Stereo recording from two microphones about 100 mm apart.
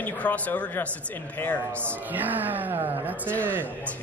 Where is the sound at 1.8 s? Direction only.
20° right (ahead or behind).